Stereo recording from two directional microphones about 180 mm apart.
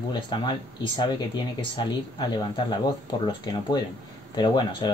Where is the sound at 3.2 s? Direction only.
25° left (ahead or behind).